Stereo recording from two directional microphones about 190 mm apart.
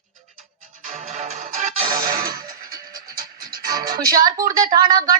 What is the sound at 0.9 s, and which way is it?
Music, 40° right (ahead or behind).